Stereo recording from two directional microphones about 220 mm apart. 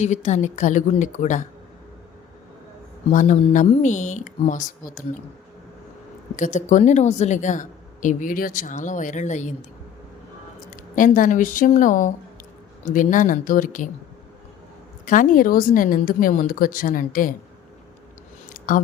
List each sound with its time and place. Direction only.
0.0 s a woman's voice: 30° left (ahead or behind)
3.1 s a woman's voice: 35° left (ahead or behind)
6.3 s a woman's voice: 35° left (ahead or behind)
10.7 s a woman's voice: 35° left (ahead or behind)
15.0 s a woman's voice: 35° left (ahead or behind)
18.4 s a sound: 40° left (ahead or behind)